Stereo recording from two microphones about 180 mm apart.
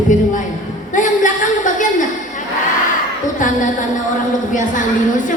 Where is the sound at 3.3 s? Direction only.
45° left (ahead or behind).